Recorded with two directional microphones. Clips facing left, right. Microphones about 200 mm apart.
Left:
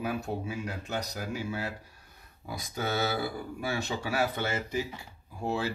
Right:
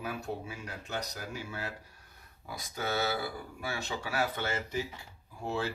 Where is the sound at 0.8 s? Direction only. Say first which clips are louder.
Left 1 dB; 10° left (ahead or behind).